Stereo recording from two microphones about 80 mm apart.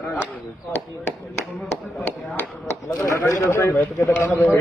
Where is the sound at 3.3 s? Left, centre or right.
Left.